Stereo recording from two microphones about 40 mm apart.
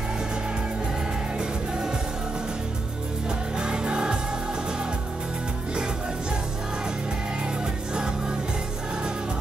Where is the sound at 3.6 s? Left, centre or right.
Right.